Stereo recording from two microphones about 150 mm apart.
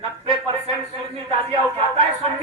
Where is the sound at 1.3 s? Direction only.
35° right (ahead or behind).